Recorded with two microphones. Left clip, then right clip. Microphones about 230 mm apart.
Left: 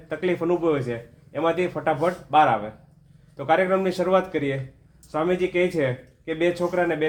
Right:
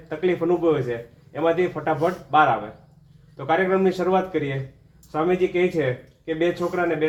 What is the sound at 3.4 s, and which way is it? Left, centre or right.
Speech, left.